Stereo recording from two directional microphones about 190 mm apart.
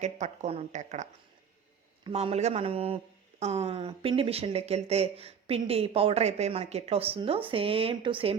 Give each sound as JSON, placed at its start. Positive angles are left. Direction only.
{"t": 0.0, "sound": "speech", "side_deg": -35}
{"t": 2.0, "sound": "speech", "side_deg": -30}